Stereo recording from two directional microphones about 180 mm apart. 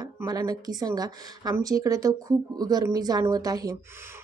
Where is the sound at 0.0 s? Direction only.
20° right (ahead or behind).